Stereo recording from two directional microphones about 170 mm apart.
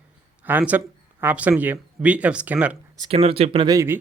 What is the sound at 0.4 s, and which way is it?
Speech, 10° right (ahead or behind).